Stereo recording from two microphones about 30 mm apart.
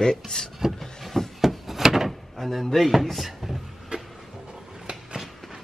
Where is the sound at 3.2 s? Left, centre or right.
Centre.